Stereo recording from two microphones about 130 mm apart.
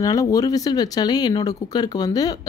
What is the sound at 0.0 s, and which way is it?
Speech, 25° left (ahead or behind).